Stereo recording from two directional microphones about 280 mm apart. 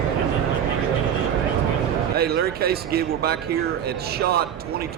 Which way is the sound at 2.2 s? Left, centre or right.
Right.